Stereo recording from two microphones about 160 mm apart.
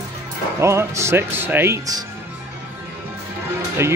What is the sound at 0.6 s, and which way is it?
Speech, 15° right (ahead or behind).